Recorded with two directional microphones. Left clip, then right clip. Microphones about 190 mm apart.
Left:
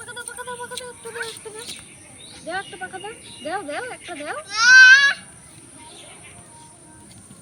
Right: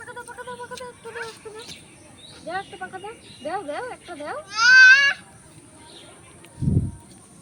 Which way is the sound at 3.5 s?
5° right (ahead or behind).